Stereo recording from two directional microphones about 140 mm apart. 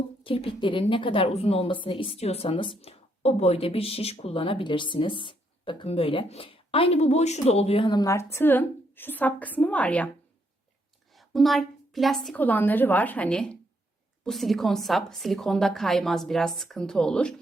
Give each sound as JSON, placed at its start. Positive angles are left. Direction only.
{"t": 0.2, "sound": "a woman's voice", "side_deg": 40}
{"t": 7.9, "sound": "a woman's voice", "side_deg": 25}
{"t": 11.1, "sound": "a woman's voice", "side_deg": 0}
{"t": 12.4, "sound": "a woman's voice", "side_deg": 10}